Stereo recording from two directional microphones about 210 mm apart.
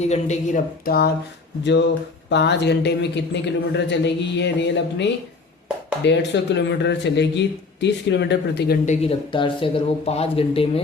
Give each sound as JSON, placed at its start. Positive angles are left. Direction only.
{"t": 0.0, "sound": "speech", "side_deg": 35}
{"t": 2.3, "sound": "a woman's voice", "side_deg": 55}
{"t": 8.9, "sound": "speech", "side_deg": 30}